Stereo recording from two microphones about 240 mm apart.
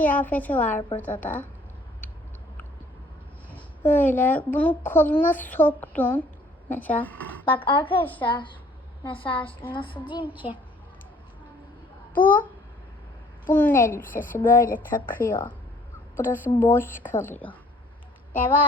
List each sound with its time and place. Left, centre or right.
0.0 s a child's voice: centre
3.5 s a child's voice: centre
7.4 s speech: left
10.3 s a child's voice: centre
12.1 s a child's voice: left
13.5 s a child's voice: centre
13.8 s a child's voice: left
14.8 s a child's voice: centre